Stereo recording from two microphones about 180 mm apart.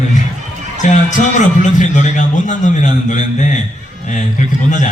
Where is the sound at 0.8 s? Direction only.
45° left (ahead or behind).